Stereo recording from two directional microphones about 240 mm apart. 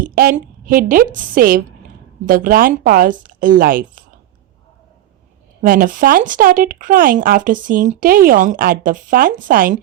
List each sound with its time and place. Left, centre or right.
0.0 s speech: right
5.6 s speech: right